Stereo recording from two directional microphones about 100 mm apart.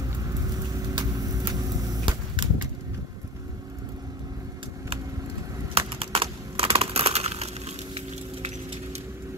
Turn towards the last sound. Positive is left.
turn(degrees=-90)